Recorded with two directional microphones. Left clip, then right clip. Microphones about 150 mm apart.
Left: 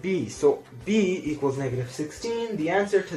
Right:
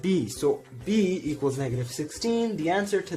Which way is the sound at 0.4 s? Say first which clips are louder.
Left 5 dB; 90° right.